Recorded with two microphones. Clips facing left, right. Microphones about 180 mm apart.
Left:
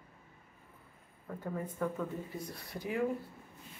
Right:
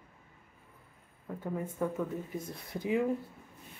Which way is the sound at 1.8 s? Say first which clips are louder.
Right 2 dB; 15° right (ahead or behind).